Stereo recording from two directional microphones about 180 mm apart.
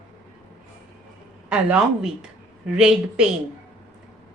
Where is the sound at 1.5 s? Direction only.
5° right (ahead or behind).